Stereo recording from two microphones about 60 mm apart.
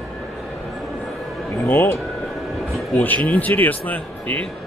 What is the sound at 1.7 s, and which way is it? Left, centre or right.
Speech, left.